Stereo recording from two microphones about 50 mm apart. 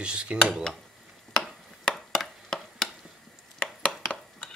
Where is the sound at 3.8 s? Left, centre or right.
Left.